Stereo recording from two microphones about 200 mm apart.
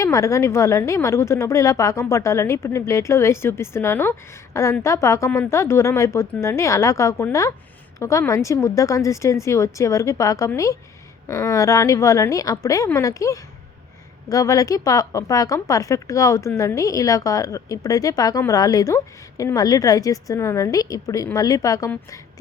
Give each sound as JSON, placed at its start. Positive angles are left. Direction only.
{"t": 0.0, "sound": "a woman's voice", "side_deg": 15}